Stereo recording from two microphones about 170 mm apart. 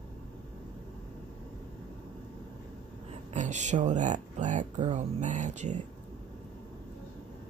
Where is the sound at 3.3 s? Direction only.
45° right (ahead or behind).